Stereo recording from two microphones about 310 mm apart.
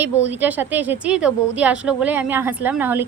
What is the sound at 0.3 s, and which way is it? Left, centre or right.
A woman's voice, centre.